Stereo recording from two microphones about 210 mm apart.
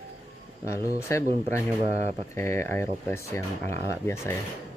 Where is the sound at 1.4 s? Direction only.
30° right (ahead or behind).